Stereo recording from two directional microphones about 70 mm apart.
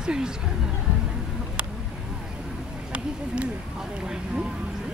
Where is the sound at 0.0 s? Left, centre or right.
Centre.